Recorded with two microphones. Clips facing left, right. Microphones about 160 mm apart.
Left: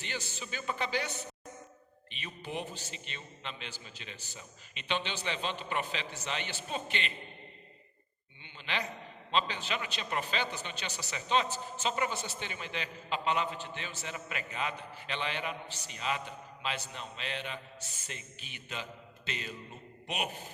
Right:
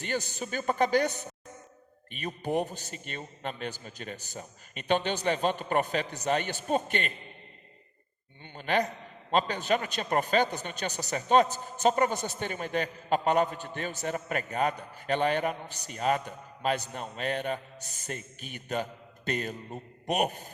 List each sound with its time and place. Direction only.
0.0 s a man's voice: 45° right (ahead or behind)
8.4 s a man's voice: 50° right (ahead or behind)